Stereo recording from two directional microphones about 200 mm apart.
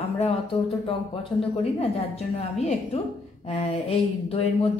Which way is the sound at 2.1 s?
30° left (ahead or behind).